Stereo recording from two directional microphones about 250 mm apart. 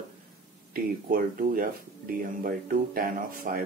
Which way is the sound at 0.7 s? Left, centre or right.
Right.